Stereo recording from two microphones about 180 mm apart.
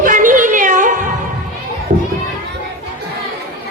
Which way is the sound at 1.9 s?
40° right (ahead or behind).